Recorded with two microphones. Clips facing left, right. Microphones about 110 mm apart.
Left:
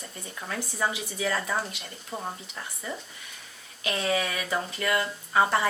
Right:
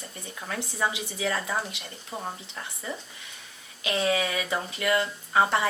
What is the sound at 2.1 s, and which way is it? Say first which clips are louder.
Speech: even; 15° right (ahead or behind).